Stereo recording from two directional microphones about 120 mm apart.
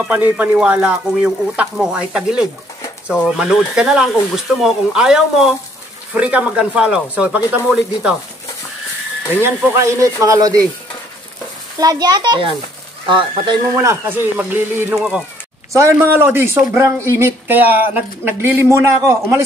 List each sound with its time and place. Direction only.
0.0 s speech: 10° right (ahead or behind)
9.4 s speech: 20° right (ahead or behind)
11.8 s a child's voice: 35° right (ahead or behind)
13.7 s speech: 20° right (ahead or behind)
15.0 s speech: 5° right (ahead or behind)
15.7 s speech: 25° right (ahead or behind)